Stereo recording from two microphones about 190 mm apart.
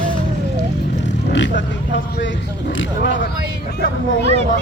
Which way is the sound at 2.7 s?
75° left (ahead or behind).